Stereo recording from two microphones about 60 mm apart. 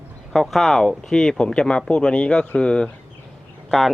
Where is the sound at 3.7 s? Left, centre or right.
Centre.